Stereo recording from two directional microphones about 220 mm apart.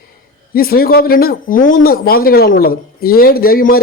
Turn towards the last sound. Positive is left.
turn(degrees=40)  # may be behind; listen again after turning